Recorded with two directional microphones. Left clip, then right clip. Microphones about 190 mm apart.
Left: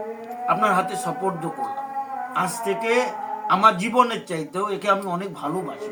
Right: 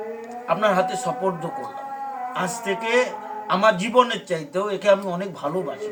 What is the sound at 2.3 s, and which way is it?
A man's voice, 15° right (ahead or behind).